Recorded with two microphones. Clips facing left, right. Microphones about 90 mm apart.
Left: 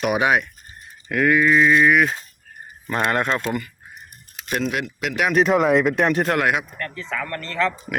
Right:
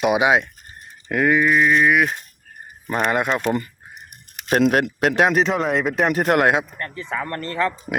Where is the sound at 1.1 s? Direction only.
5° right (ahead or behind).